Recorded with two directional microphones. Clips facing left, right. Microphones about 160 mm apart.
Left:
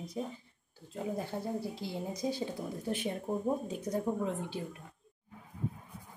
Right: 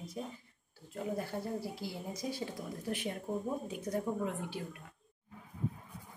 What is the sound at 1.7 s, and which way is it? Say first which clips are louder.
A woman's voice: left 3 dB; 25° left (ahead or behind).